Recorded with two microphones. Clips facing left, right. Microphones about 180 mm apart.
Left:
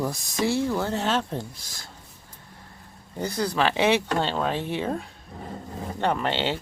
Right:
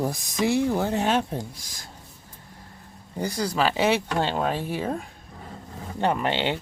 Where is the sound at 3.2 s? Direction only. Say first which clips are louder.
Even; 10° right (ahead or behind).